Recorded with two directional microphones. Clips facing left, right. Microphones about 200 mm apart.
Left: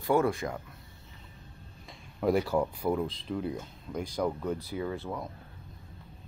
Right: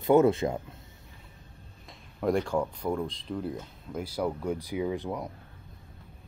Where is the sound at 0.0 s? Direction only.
20° right (ahead or behind).